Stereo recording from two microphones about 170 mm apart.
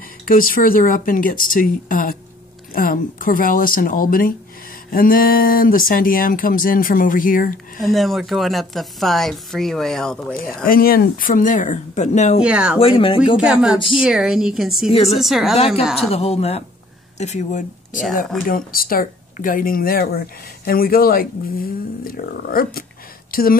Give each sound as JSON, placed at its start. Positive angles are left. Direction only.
{"t": 0.2, "sound": "speech", "side_deg": 55}
{"t": 7.8, "sound": "a woman's voice", "side_deg": 0}
{"t": 10.3, "sound": "speech", "side_deg": 55}
{"t": 12.4, "sound": "speech", "side_deg": -5}
{"t": 12.7, "sound": "a woman's voice", "side_deg": 35}
{"t": 13.4, "sound": "a woman's voice", "side_deg": -5}
{"t": 14.9, "sound": "a woman's voice", "side_deg": 35}
{"t": 15.1, "sound": "a woman's voice", "side_deg": 0}
{"t": 15.5, "sound": "a woman's voice", "side_deg": 35}
{"t": 15.8, "sound": "a woman's voice", "side_deg": 0}
{"t": 16.1, "sound": "a woman's voice", "side_deg": 35}
{"t": 18.5, "sound": "speech", "side_deg": 60}